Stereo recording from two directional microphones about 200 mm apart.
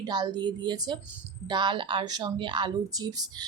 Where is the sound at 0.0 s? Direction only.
20° right (ahead or behind).